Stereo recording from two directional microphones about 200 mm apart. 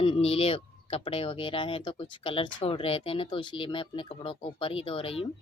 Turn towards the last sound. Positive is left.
turn(degrees=25)  # may be behind; listen again after turning